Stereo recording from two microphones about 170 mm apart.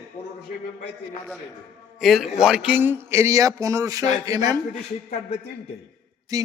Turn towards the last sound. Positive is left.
turn(degrees=-20)  # may be behind; listen again after turning